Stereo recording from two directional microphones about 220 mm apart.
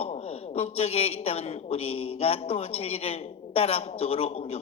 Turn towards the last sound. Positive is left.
turn(degrees=30)  # may be behind; listen again after turning